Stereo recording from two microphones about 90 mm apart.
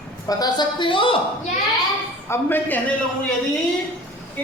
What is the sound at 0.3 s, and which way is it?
Speech, 45° left (ahead or behind).